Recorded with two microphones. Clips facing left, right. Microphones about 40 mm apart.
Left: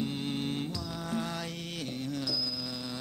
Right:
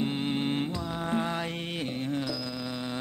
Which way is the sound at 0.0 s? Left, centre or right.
Right.